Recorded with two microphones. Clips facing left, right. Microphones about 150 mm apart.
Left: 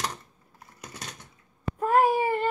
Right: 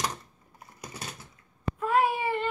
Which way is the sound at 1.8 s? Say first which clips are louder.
Left 4 dB; 45° left (ahead or behind).